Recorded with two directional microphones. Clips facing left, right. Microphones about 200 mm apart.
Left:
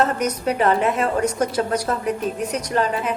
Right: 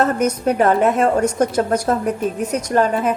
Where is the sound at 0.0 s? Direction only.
50° right (ahead or behind).